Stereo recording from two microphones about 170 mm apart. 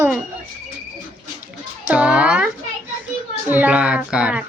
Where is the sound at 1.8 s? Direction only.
10° right (ahead or behind).